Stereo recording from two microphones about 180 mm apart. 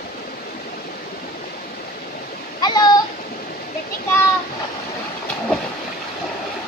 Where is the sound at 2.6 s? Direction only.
20° left (ahead or behind).